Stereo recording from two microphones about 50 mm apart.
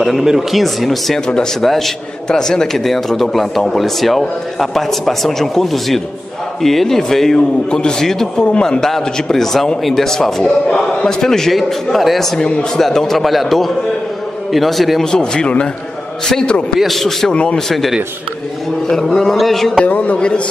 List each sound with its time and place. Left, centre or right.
0.0 s speech: centre
1.2 s a man's voice: centre
16.7 s speech: centre
17.3 s a woman's voice: left
17.6 s a man's voice: centre
19.8 s a woman's voice: left